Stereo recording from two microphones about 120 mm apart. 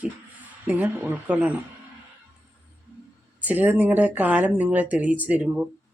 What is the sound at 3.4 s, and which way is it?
Speech, 15° right (ahead or behind).